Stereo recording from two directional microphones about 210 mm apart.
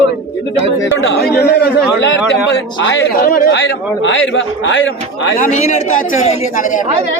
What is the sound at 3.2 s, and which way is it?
A man's voice, 45° left (ahead or behind).